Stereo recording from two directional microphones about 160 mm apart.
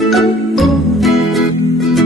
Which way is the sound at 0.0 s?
Centre (ahead or behind).